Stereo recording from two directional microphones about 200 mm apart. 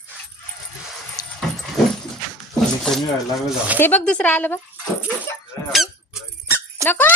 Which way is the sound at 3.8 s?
5° left (ahead or behind).